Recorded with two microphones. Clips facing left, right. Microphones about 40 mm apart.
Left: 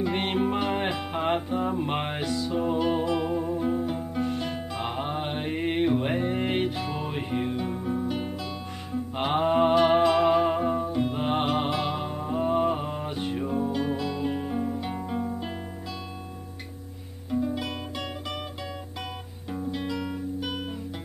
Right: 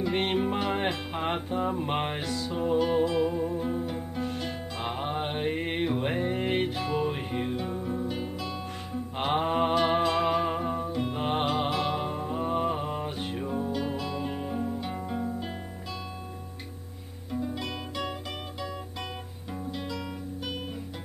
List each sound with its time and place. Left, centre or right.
0.0 s music: centre
17.3 s music: centre
19.7 s music: centre